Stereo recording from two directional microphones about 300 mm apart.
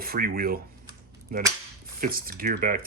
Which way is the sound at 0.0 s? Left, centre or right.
Right.